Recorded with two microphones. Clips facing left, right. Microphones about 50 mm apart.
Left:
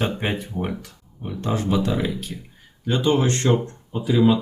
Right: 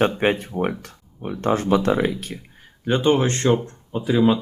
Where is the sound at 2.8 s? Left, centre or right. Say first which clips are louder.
Right 2 dB; right.